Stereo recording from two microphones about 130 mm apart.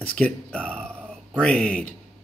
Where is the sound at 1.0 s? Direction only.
10° right (ahead or behind).